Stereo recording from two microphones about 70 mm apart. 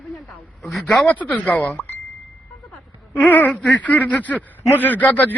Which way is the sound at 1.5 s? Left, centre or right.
Left.